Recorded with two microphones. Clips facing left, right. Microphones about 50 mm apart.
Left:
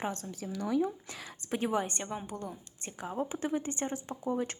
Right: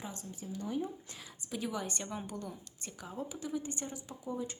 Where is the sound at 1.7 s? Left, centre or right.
Left.